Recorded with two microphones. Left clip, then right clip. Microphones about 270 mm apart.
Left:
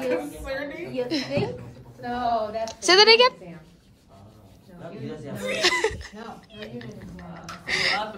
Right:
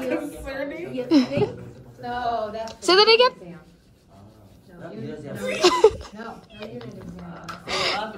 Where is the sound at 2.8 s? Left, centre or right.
Centre.